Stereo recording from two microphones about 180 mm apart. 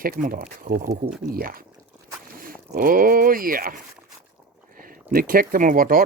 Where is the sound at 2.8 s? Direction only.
50° right (ahead or behind).